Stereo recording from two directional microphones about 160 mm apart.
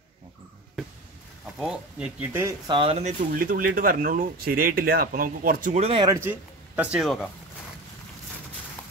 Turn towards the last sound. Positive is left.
turn(degrees=-10)  # may be behind; listen again after turning